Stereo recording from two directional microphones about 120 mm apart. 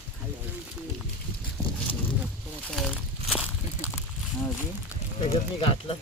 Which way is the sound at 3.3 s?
10° right (ahead or behind).